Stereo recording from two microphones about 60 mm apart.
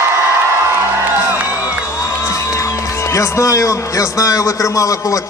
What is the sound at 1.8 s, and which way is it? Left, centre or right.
A man's voice, left.